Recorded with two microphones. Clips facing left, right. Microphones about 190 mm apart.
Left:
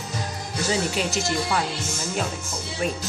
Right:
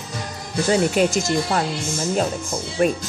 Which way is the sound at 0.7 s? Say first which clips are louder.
Right 8 dB; 50° right (ahead or behind).